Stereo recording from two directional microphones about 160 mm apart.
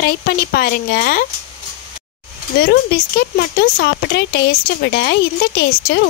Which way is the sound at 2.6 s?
85° left.